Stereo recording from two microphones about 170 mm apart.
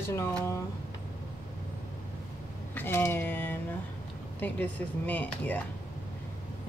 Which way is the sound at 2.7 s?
15° left (ahead or behind).